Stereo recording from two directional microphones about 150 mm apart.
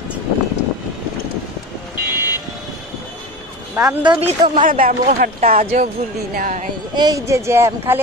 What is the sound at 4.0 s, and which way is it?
Speech, 30° right (ahead or behind).